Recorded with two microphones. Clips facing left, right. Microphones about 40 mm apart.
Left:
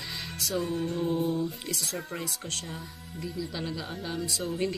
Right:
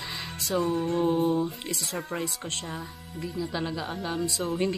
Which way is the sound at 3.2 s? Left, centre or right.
Centre.